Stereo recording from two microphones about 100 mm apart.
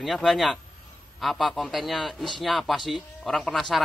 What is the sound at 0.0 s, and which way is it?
Speech, centre (ahead or behind).